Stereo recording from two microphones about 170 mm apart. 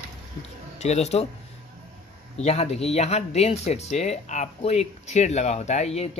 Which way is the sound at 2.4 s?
40° left (ahead or behind).